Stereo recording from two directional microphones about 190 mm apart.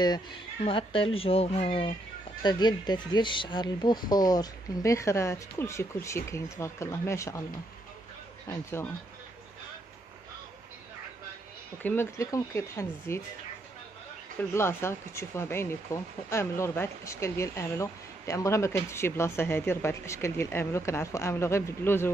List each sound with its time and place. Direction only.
0.7 s speech: 30° left (ahead or behind)
8.5 s speech: 15° left (ahead or behind)
11.8 s speech: 10° left (ahead or behind)
14.5 s speech: 15° left (ahead or behind)